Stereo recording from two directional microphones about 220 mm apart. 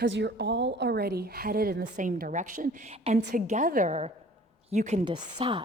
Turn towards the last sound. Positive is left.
turn(degrees=-20)  # may be behind; listen again after turning